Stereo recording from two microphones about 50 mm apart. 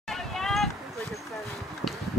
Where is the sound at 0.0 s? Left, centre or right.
Centre.